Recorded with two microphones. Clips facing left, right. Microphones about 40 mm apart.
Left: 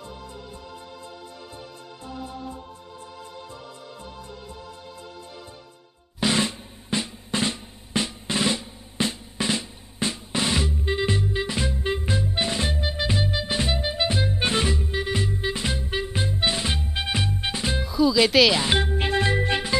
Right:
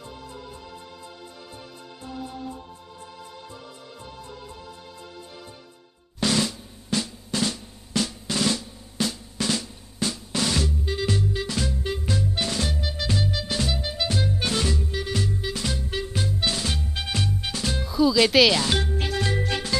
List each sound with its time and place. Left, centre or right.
6.1 s drum: left
17.8 s music: centre
18.6 s music: left